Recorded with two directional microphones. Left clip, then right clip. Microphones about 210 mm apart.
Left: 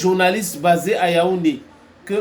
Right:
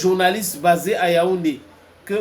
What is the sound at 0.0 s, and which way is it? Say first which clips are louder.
Speech: left 1 dB; centre (ahead or behind).